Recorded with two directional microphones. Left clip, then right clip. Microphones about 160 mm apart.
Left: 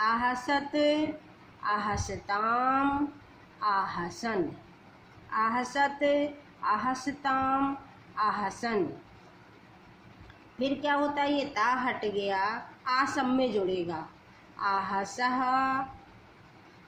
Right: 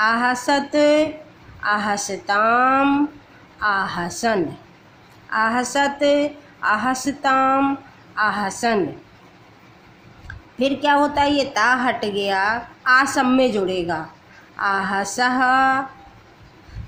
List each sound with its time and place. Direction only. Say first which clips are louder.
0.0 s a woman's voice: right 9 dB; 30° right (ahead or behind)
10.6 s a woman's voice: right 11 dB; 35° right (ahead or behind)